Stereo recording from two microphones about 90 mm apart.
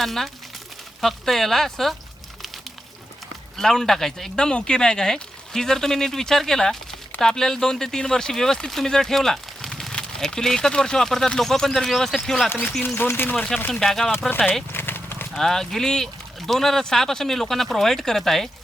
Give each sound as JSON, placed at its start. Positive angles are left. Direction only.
{"t": 0.0, "sound": "speech", "side_deg": 0}
{"t": 3.6, "sound": "speech", "side_deg": 5}
{"t": 12.8, "sound": "speech", "side_deg": 25}
{"t": 13.3, "sound": "speech", "side_deg": 10}
{"t": 14.3, "sound": "speech", "side_deg": 20}
{"t": 14.7, "sound": "clip-clop", "side_deg": 25}
{"t": 15.4, "sound": "speech", "side_deg": 5}